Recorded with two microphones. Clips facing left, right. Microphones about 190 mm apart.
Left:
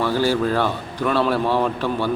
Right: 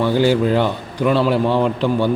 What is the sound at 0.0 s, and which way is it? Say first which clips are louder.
A man's voice: right 4 dB; 20° right (ahead or behind).